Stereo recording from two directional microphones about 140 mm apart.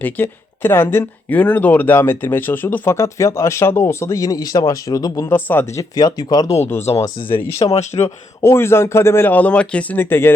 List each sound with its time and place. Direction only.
0.0 s speech: 15° left (ahead or behind)
5.3 s speech: 15° left (ahead or behind)
7.6 s speech: 50° left (ahead or behind)
8.0 s speech: 20° left (ahead or behind)